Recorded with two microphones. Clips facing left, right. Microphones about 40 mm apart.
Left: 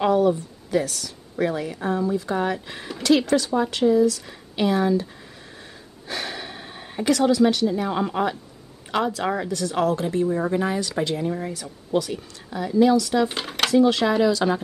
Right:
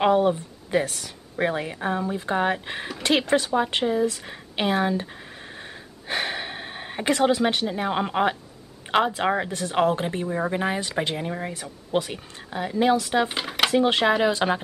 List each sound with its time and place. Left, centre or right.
0.0 s speech: right
6.0 s speech: right
13.3 s a sound: centre
13.7 s speech: right